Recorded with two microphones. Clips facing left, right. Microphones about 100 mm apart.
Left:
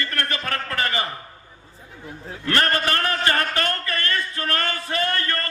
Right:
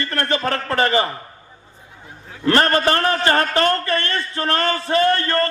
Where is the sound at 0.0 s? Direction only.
30° right (ahead or behind).